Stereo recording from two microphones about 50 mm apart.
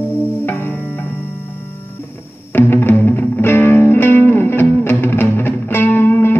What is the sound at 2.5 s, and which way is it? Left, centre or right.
Music, left.